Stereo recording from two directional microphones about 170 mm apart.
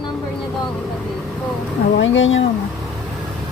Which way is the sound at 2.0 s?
90° left.